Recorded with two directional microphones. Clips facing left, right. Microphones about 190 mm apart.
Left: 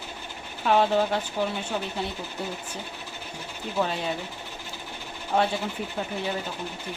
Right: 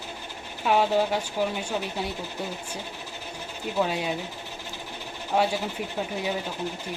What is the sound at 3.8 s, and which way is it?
Speech, 10° right (ahead or behind).